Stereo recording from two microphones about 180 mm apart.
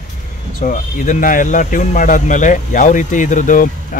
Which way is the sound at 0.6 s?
50° left (ahead or behind).